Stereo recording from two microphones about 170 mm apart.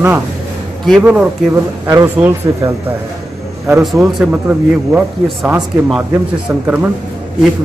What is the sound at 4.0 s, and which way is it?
Speech, 10° right (ahead or behind).